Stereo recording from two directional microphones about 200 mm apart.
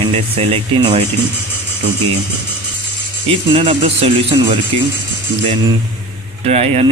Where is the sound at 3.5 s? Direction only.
30° right (ahead or behind).